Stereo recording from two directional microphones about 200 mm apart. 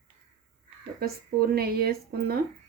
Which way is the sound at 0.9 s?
50° right (ahead or behind).